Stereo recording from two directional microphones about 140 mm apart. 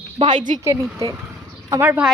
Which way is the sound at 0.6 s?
20° right (ahead or behind).